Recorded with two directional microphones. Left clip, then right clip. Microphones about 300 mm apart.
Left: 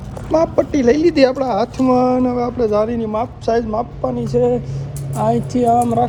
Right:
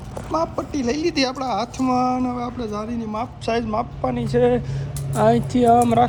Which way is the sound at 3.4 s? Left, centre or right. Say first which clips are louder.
Left 3 dB; centre.